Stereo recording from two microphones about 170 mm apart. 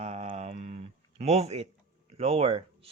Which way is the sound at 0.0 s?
40° right (ahead or behind).